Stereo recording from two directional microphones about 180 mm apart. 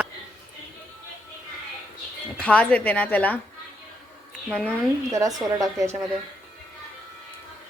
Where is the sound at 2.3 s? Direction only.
5° left (ahead or behind).